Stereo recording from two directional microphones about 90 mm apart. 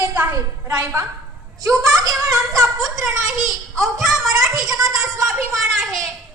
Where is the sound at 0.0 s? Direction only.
20° right (ahead or behind).